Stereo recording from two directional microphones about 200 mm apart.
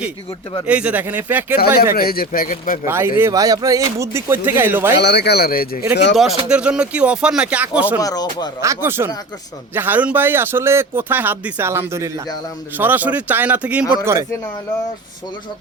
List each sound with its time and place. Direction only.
0.7 s speech: 5° right (ahead or behind)
1.5 s speech: 50° left (ahead or behind)
2.8 s speech: 10° right (ahead or behind)
4.9 s speech: 55° left (ahead or behind)
6.1 s speech: 5° right (ahead or behind)
8.0 s speech: 20° left (ahead or behind)
8.6 s speech: 15° right (ahead or behind)